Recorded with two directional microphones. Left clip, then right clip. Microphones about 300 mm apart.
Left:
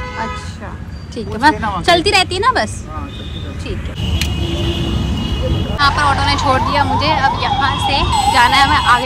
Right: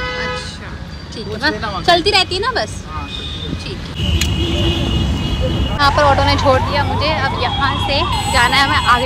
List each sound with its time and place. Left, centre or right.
2.0 s a woman's voice: left
5.8 s speech: centre